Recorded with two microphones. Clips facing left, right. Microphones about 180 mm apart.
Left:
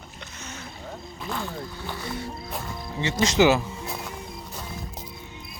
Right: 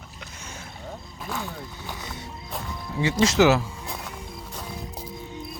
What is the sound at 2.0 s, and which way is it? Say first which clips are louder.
Music: left 5 dB; 20° right (ahead or behind).